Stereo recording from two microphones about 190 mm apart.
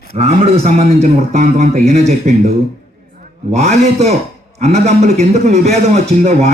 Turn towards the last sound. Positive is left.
turn(degrees=-35)  # may be behind; listen again after turning